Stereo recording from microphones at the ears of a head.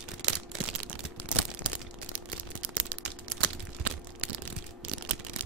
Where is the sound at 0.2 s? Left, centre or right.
Right.